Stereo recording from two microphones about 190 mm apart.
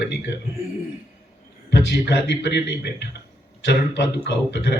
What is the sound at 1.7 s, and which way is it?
A man's voice, 65° left (ahead or behind).